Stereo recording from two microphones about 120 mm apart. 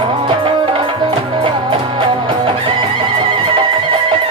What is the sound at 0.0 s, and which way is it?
Music, 45° right (ahead or behind).